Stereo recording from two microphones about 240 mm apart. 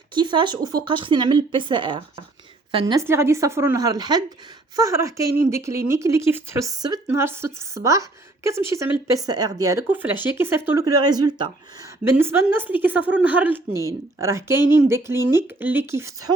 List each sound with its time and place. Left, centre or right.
0.1 s speech: centre